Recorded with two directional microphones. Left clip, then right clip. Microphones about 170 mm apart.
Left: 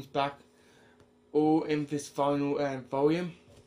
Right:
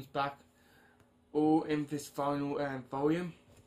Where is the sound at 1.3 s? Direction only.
5° left (ahead or behind).